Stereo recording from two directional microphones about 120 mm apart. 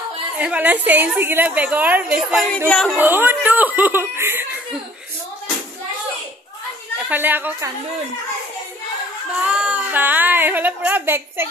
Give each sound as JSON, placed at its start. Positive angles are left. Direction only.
{"t": 0.4, "sound": "speech", "side_deg": -10}
{"t": 2.7, "sound": "speech", "side_deg": 5}
{"t": 3.0, "sound": "speech", "side_deg": -15}
{"t": 7.1, "sound": "speech", "side_deg": -15}
{"t": 9.4, "sound": "speech", "side_deg": -10}